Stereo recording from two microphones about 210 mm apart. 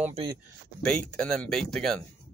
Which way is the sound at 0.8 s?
5° left (ahead or behind).